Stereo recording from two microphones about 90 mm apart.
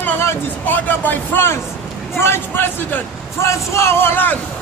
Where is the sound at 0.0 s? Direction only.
25° left (ahead or behind).